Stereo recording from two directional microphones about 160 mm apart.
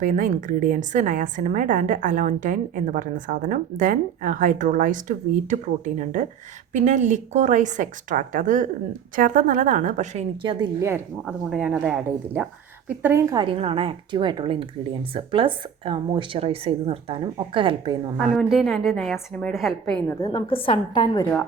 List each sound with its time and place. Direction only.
0.0 s a woman's voice: 55° right (ahead or behind)
10.4 s speech: 30° right (ahead or behind)
10.8 s speech: 15° right (ahead or behind)
11.3 s a woman's voice: 5° right (ahead or behind)
13.3 s speech: 35° right (ahead or behind)
18.2 s a woman's voice: centre (ahead or behind)
20.2 s a woman's voice: 30° left (ahead or behind)